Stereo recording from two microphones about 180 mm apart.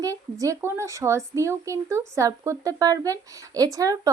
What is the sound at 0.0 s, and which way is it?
Speech, 20° right (ahead or behind).